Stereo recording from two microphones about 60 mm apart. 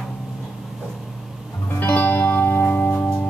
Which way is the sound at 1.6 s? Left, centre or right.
Left.